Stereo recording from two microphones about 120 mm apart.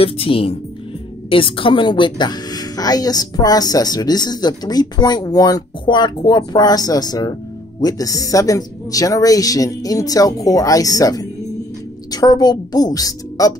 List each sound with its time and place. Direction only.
0.0 s speech: 50° left (ahead or behind); by 13.6 s 30° left (ahead or behind)